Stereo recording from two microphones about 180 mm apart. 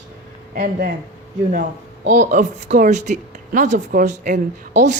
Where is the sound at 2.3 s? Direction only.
45° right (ahead or behind).